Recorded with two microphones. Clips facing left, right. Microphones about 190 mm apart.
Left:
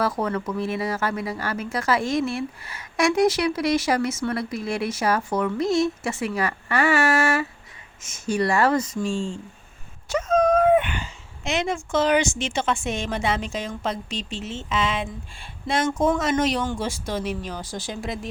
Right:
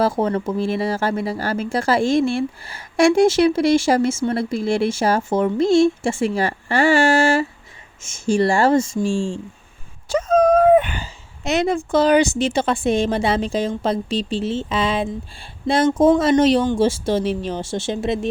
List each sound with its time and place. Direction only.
0.0 s a woman's voice: 30° right (ahead or behind)
10.1 s a sound: 30° right (ahead or behind)
11.9 s a woman's voice: 35° right (ahead or behind)